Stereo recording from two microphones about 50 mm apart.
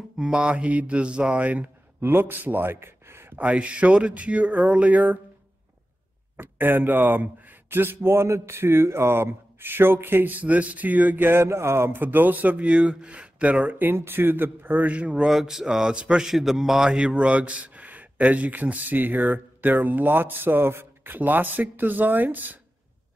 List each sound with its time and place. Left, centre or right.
0.2 s a sound: right
1.4 s a man's voice: right
2.0 s a man's voice: right
3.3 s a sound: right
6.3 s speech: right
8.3 s speech: right
12.0 s a man's voice: right
14.9 s a sound: right
15.2 s speech: centre
16.3 s a man's voice: centre; by 22.6 s right